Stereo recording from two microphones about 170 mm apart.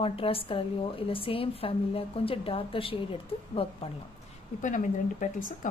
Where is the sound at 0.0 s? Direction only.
35° left (ahead or behind).